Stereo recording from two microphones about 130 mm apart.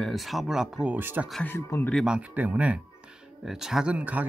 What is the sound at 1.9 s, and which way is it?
Speech, 5° right (ahead or behind).